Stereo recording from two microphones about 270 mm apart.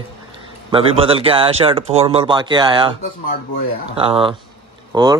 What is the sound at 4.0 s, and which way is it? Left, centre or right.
Speech, centre.